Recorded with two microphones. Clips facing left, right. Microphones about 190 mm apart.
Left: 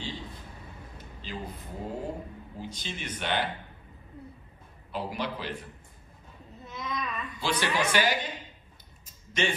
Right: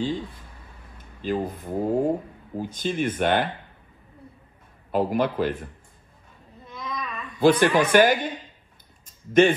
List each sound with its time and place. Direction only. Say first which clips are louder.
0.9 s a woman's voice: right 14 dB; 50° right (ahead or behind)
4.9 s a woman's voice: right 11 dB; 50° right (ahead or behind)
6.6 s babbling: right 1 dB; 5° left (ahead or behind)
7.3 s a woman's voice: right 12 dB; 50° right (ahead or behind)
9.3 s a woman's voice: right 13 dB; 55° right (ahead or behind)